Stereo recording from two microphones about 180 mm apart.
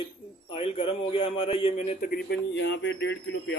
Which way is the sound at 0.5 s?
30° left (ahead or behind).